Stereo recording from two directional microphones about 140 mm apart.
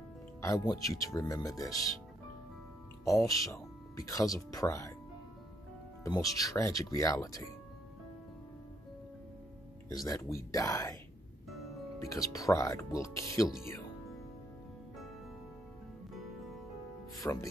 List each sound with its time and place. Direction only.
0.4 s speech: 25° left (ahead or behind)
3.1 s speech: 25° left (ahead or behind)
6.0 s speech: 25° left (ahead or behind)
10.0 s speech: 25° left (ahead or behind)
12.0 s speech: 25° left (ahead or behind)
17.2 s speech: 25° left (ahead or behind)